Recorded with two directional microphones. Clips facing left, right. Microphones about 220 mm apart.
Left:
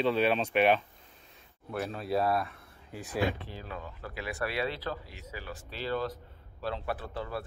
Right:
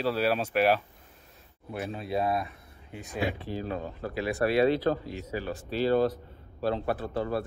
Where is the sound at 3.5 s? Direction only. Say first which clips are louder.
Right 9 dB; 40° right (ahead or behind).